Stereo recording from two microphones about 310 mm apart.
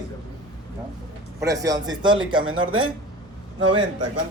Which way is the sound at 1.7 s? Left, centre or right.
Centre.